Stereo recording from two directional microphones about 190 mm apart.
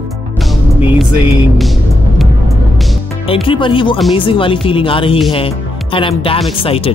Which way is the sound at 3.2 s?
30° left (ahead or behind).